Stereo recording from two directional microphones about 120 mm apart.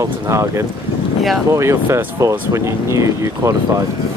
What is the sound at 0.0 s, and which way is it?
Speech, 25° right (ahead or behind).